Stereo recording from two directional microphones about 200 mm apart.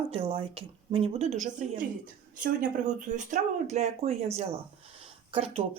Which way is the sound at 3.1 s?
35° right (ahead or behind).